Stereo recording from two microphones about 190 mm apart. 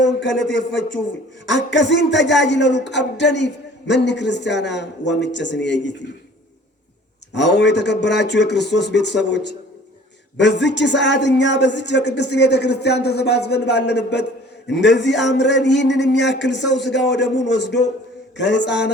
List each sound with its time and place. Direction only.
0.4 s speech: 75° left (ahead or behind)
7.3 s a man's voice: 65° left (ahead or behind)